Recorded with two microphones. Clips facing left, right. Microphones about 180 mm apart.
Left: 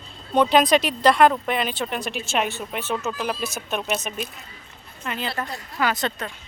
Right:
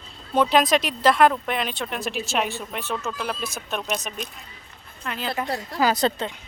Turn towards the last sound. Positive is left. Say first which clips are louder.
# right 3 dB
turn(degrees=-35)  # may be behind; listen again after turning